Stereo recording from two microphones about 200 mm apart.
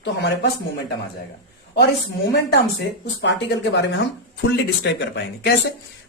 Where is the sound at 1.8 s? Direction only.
55° left (ahead or behind).